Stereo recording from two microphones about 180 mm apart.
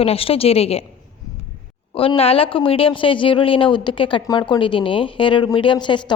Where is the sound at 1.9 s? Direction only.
30° left (ahead or behind).